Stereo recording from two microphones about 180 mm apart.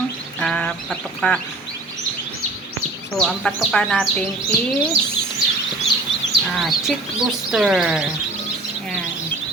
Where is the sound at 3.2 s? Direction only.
Centre (ahead or behind).